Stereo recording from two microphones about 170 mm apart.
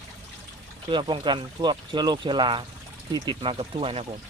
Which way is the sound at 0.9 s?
30° right (ahead or behind).